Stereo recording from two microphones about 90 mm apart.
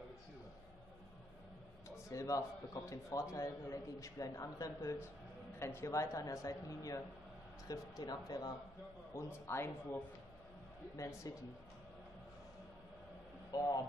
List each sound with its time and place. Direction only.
1.9 s a man's voice: 35° left (ahead or behind)
9.1 s a man's voice: 30° left (ahead or behind)
11.3 s a man's voice: 40° left (ahead or behind)
13.5 s speech: 40° left (ahead or behind)